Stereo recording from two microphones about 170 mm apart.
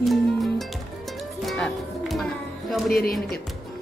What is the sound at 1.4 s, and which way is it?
Music, centre (ahead or behind).